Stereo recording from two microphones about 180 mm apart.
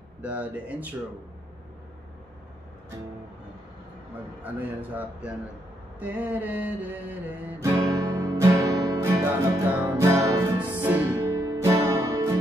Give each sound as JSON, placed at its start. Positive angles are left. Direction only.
{"t": 0.2, "sound": "speech", "side_deg": -10}
{"t": 4.4, "sound": "speech", "side_deg": -10}
{"t": 5.9, "sound": "music", "side_deg": -10}